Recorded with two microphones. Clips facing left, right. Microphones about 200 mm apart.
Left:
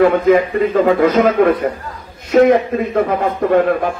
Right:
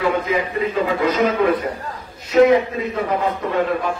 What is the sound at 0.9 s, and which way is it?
A man's voice, 50° left (ahead or behind).